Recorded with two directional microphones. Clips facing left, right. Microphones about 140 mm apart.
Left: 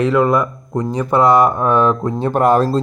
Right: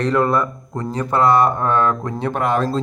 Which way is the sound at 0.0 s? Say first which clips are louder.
Left 3 dB; 5° left (ahead or behind).